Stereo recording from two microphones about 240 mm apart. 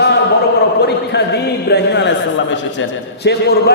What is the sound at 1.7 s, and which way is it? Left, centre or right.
Speech, left.